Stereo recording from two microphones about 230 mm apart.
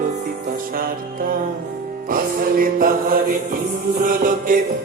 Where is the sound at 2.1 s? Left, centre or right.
Right.